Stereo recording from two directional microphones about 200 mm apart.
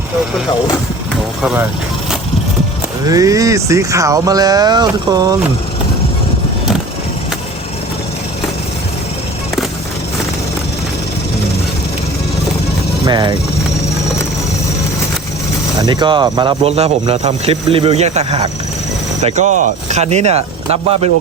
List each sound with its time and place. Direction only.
1.4 s speech: 5° right (ahead or behind)
3.1 s speech: 15° right (ahead or behind)
13.1 s speech: 20° right (ahead or behind)
15.8 s speech: 20° right (ahead or behind)